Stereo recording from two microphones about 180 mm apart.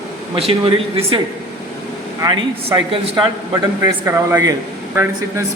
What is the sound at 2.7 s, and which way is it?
Speech, 30° right (ahead or behind).